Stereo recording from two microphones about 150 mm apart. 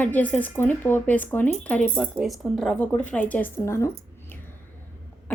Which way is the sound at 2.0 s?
Centre (ahead or behind).